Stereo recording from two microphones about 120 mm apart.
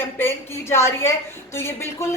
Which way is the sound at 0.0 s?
20° left (ahead or behind).